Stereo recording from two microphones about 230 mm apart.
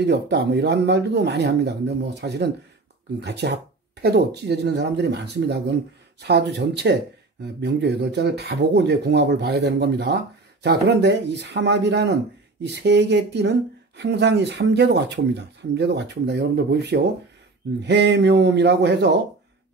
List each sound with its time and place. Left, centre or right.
0.0 s speech: right